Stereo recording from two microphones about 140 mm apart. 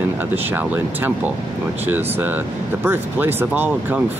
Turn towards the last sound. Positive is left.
turn(degrees=-15)  # may be behind; listen again after turning